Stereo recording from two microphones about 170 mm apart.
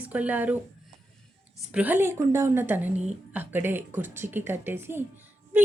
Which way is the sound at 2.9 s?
40° right (ahead or behind).